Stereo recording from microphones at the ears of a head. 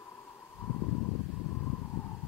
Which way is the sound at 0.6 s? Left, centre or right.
Left.